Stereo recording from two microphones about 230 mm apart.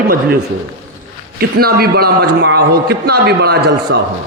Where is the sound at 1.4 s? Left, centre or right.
Right.